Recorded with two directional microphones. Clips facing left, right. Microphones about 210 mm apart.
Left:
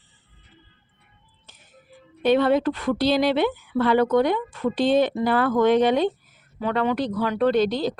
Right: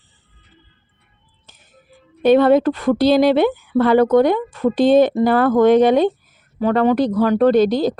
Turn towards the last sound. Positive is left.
turn(degrees=-40)  # may be behind; listen again after turning